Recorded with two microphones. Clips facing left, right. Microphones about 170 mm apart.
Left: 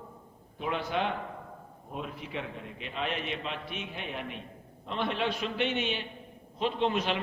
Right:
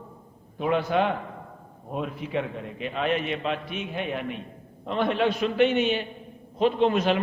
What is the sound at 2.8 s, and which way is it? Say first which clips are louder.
A man's voice: right 8 dB; 50° right (ahead or behind).